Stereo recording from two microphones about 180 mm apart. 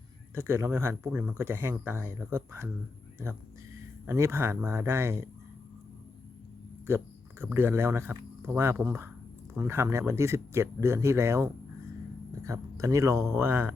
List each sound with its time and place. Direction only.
0.3 s speech: 15° right (ahead or behind)
4.0 s speech: 15° right (ahead or behind)
6.8 s speech: 15° right (ahead or behind)